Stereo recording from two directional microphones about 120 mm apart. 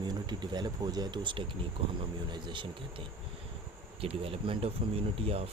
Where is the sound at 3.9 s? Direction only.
50° right (ahead or behind).